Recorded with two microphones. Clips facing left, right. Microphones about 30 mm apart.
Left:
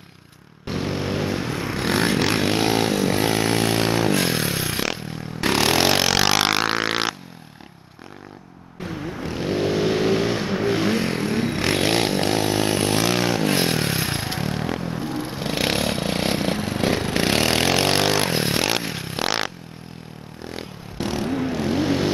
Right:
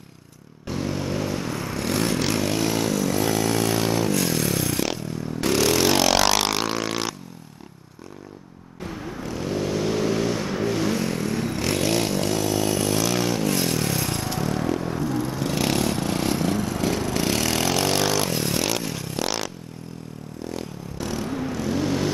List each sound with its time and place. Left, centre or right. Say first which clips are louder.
0.7 s vehicle: left 2 dB; left
5.9 s vehicle: even; centre
6.4 s music: left 4 dB; left
9.2 s vehicle: left 3 dB; left